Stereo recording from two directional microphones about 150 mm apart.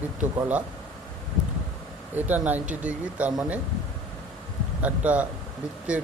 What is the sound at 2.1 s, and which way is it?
Speech, 10° right (ahead or behind).